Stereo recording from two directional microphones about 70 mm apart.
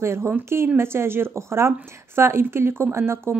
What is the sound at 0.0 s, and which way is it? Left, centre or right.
Speech, right.